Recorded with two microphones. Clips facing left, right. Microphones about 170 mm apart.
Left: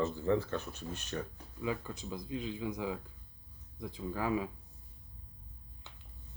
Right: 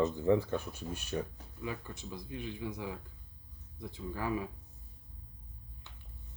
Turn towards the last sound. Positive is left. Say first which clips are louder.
# left 2 dB
turn(degrees=20)  # may be behind; listen again after turning